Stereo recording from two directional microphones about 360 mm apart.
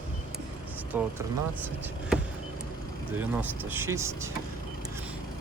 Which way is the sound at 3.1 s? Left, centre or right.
Centre.